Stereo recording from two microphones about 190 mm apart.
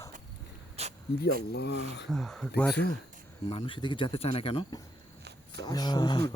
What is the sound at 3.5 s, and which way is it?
Speech, 30° left (ahead or behind).